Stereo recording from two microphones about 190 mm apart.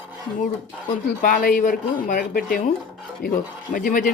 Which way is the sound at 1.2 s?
45° left (ahead or behind).